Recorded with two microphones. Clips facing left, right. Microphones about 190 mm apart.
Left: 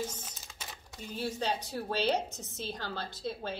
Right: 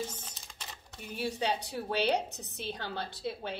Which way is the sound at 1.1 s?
65° right (ahead or behind).